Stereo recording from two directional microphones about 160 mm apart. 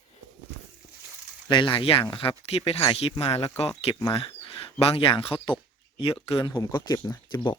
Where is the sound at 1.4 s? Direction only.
30° left (ahead or behind).